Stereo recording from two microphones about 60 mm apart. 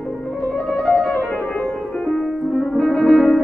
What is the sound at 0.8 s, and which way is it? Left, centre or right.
Music, centre.